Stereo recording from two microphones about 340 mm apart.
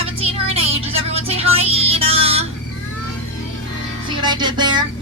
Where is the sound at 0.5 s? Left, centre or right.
Centre.